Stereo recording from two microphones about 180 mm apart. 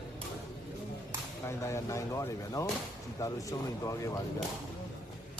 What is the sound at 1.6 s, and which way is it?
Speech, 15° left (ahead or behind).